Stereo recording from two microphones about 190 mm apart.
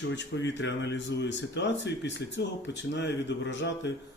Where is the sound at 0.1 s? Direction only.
70° left (ahead or behind).